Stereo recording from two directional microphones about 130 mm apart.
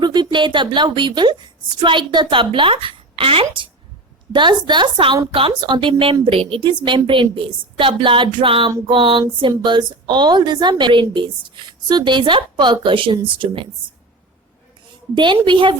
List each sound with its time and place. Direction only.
0.0 s a woman's voice: 35° right (ahead or behind)
15.1 s a woman's voice: 35° right (ahead or behind)